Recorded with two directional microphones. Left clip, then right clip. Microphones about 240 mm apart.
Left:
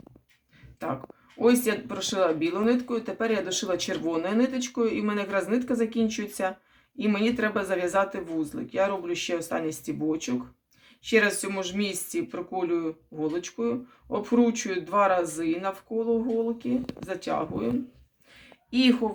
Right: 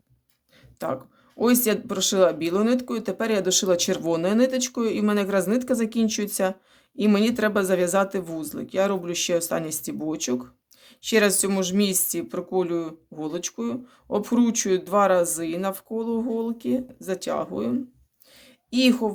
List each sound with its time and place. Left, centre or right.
1.4 s speech: right
18.7 s speech: right